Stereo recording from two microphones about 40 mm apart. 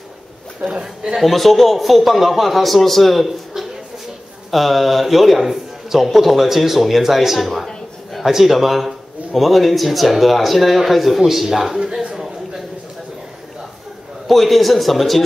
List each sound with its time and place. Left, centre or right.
0.6 s a man's voice: right
1.0 s a man's voice: centre
7.6 s a sound: centre
8.3 s speech: centre
14.2 s speech: centre